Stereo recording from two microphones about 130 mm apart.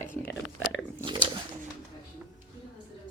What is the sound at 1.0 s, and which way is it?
Speech, 40° right (ahead or behind).